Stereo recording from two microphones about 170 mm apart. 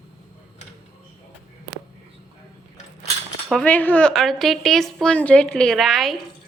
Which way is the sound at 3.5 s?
5° left (ahead or behind).